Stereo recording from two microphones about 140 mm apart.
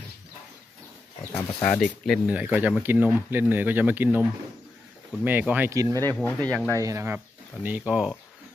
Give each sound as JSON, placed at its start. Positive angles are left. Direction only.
{"t": 1.3, "sound": "speech", "side_deg": 10}
{"t": 2.0, "sound": "speech", "side_deg": -10}
{"t": 6.1, "sound": "speech", "side_deg": 10}
{"t": 6.7, "sound": "speech", "side_deg": -20}
{"t": 7.6, "sound": "speech", "side_deg": -10}